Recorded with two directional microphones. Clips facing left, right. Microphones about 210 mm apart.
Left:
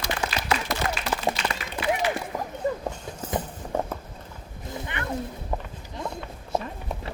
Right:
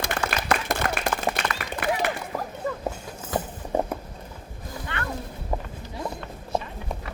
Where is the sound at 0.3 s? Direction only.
55° right (ahead or behind).